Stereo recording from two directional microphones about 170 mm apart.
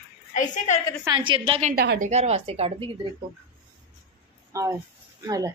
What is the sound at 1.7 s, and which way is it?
Speech, 70° right (ahead or behind).